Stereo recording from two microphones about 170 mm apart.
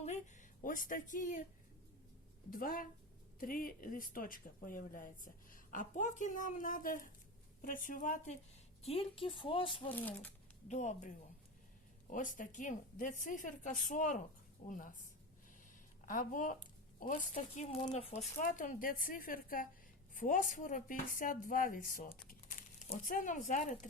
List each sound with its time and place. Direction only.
0.0 s speech: 45° left (ahead or behind)
2.5 s speech: 55° left (ahead or behind)
8.8 s a woman's voice: 35° left (ahead or behind)
9.9 s speech: 10° left (ahead or behind)
10.7 s speech: 45° left (ahead or behind)
12.1 s speech: 50° left (ahead or behind)
16.0 s a woman's voice: 50° left (ahead or behind)
17.3 s a woman's voice: 35° left (ahead or behind)